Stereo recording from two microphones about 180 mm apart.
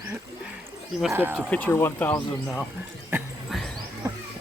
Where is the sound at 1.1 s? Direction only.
10° right (ahead or behind).